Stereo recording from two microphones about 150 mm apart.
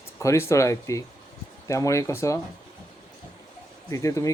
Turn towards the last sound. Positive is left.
turn(degrees=20)  # may be behind; listen again after turning